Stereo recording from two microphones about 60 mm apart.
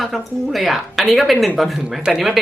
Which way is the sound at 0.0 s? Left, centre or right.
Centre.